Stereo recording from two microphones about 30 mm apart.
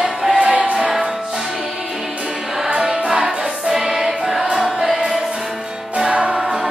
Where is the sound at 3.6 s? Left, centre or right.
Centre.